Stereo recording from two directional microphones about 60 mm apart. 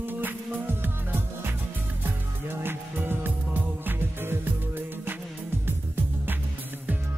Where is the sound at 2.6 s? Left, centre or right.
Right.